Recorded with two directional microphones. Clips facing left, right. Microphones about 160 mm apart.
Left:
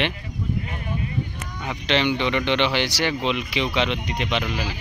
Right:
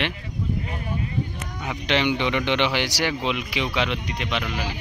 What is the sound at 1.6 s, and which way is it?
A man's voice, 10° right (ahead or behind).